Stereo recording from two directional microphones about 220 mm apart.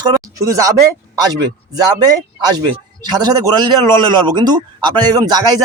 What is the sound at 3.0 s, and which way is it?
A man's voice, 20° right (ahead or behind).